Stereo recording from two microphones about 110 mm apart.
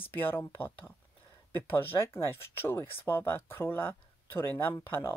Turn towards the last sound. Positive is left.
turn(degrees=20)  # may be behind; listen again after turning